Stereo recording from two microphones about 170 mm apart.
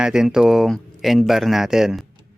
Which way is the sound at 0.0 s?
5° right (ahead or behind).